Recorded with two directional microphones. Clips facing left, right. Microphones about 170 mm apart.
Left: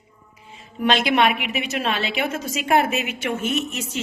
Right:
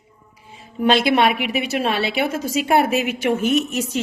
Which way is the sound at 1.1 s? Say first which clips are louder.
Right 2 dB; 35° right (ahead or behind).